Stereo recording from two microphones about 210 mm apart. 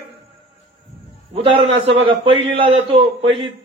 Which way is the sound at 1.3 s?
25° right (ahead or behind).